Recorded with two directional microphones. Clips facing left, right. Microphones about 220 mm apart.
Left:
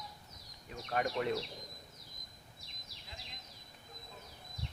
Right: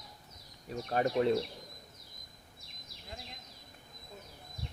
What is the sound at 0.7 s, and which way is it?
Speech, 35° right (ahead or behind).